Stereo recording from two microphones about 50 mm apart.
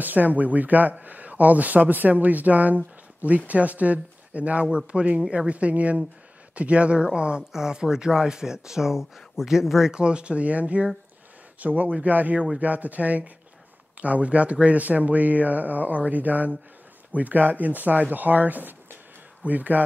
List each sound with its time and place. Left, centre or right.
0.0 s speech: right